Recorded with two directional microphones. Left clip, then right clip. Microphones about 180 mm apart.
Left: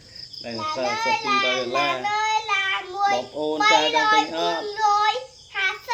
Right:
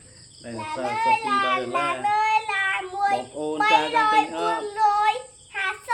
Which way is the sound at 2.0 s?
30° right (ahead or behind).